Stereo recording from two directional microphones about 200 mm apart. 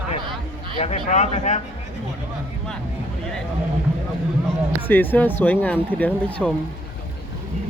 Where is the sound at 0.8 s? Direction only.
35° left (ahead or behind).